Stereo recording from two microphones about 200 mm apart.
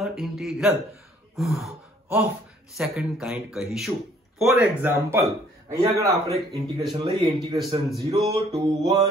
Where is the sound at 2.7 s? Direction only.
Centre (ahead or behind).